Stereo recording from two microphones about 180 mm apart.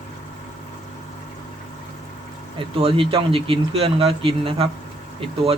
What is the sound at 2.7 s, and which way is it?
Speech, 30° right (ahead or behind).